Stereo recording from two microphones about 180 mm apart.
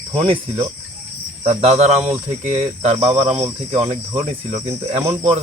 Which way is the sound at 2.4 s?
35° right (ahead or behind).